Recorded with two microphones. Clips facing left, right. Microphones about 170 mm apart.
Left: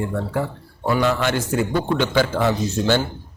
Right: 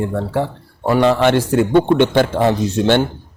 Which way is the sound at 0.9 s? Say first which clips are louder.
Right 6 dB; 70° right (ahead or behind).